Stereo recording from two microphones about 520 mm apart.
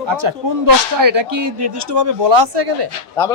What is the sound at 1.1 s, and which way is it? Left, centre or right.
Speech, right.